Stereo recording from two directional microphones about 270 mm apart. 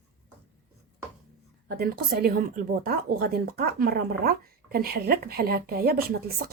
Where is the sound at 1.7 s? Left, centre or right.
Right.